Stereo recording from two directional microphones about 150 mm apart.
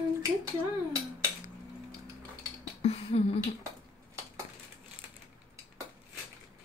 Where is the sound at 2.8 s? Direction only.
40° left (ahead or behind).